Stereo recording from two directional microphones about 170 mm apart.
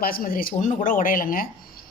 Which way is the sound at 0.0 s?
60° left (ahead or behind).